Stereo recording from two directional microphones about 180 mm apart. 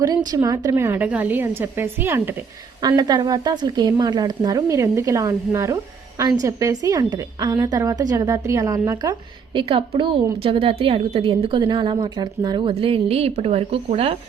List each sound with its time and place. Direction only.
0.0 s a woman's voice: 20° right (ahead or behind)
2.8 s a woman's voice: 20° right (ahead or behind)